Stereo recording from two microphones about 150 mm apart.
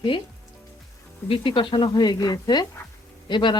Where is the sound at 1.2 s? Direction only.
35° left (ahead or behind).